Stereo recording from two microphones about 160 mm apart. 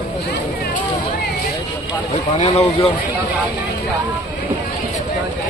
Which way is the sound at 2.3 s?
40° left (ahead or behind).